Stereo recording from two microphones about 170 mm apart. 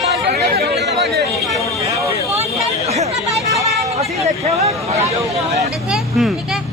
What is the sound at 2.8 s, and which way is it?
Chatter, 40° right (ahead or behind).